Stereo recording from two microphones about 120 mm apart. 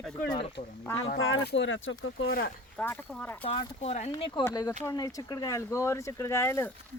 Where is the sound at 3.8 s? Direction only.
65° left (ahead or behind).